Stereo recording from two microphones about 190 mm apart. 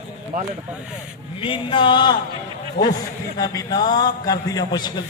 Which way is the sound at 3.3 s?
20° left (ahead or behind).